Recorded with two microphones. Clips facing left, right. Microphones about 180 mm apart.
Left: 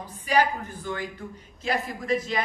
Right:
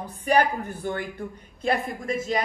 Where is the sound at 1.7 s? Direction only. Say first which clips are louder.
Left 3 dB; 55° right (ahead or behind).